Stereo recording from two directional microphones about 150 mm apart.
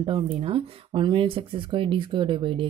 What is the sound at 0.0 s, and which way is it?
Speech, 35° right (ahead or behind).